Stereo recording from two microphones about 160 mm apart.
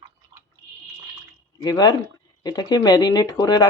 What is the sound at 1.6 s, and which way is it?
Speech, 25° left (ahead or behind).